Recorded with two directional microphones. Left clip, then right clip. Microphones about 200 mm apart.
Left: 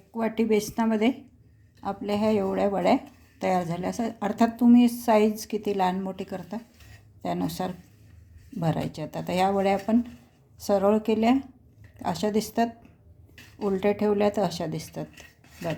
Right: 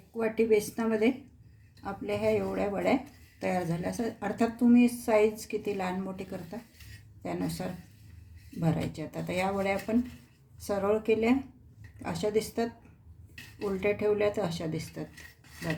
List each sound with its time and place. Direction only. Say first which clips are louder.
0.2 s a woman's voice: left 1 dB; 40° left (ahead or behind)